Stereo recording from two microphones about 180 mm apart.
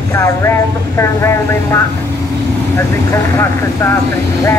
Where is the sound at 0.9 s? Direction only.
15° left (ahead or behind).